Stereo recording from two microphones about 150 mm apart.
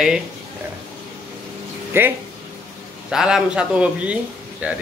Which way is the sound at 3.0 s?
5° right (ahead or behind).